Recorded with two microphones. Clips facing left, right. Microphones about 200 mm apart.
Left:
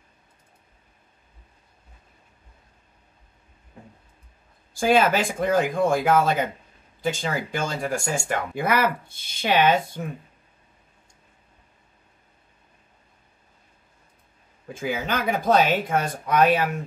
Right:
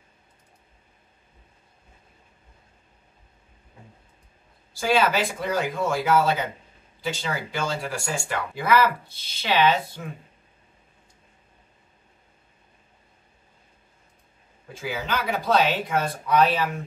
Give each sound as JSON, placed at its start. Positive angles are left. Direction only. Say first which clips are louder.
{"t": 4.7, "sound": "speech", "louder": "left 3 dB", "side_deg": 50}
{"t": 14.7, "sound": "speech", "louder": "left 3 dB", "side_deg": 50}